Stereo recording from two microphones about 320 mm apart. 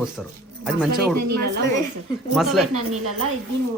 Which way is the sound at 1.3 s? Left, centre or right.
Right.